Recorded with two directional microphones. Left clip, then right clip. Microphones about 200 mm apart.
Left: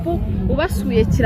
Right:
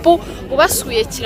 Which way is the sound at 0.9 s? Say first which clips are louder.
Right 1 dB; 25° right (ahead or behind).